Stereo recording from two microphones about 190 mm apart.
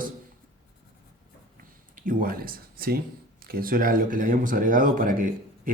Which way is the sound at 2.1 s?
50° right (ahead or behind).